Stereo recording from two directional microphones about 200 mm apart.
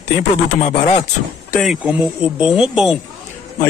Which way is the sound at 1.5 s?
5° right (ahead or behind).